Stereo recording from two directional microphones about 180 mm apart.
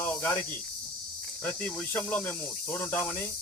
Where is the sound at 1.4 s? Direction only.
10° left (ahead or behind).